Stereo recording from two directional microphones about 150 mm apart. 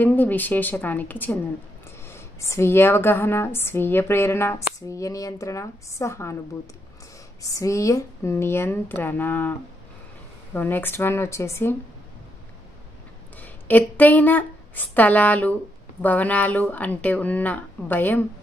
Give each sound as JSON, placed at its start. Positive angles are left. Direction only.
{"t": 0.0, "sound": "speech", "side_deg": 10}
{"t": 7.4, "sound": "speech", "side_deg": 20}
{"t": 13.4, "sound": "speech", "side_deg": 10}